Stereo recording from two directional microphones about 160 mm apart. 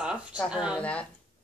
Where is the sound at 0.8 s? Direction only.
10° left (ahead or behind).